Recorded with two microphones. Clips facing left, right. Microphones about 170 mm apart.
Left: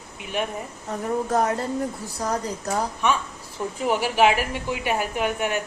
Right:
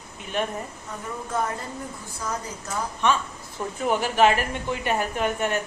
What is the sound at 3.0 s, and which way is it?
A woman's voice, 10° left (ahead or behind).